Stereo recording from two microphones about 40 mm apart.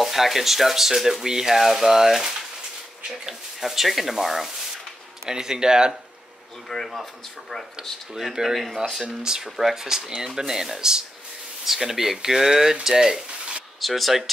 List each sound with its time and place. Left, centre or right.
0.0 s speech: centre
5.3 s speech: centre
6.7 s speech: centre
8.1 s speech: centre
13.7 s speech: centre